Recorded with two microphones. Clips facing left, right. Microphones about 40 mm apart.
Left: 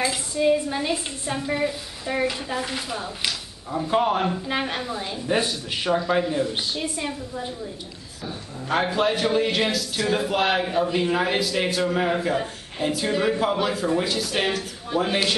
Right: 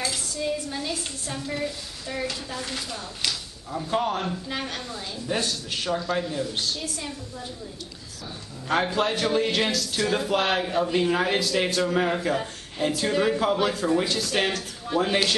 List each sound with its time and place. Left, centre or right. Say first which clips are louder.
0.0 s a woman's voice: left 7 dB; left
8.8 s speech: left 2 dB; centre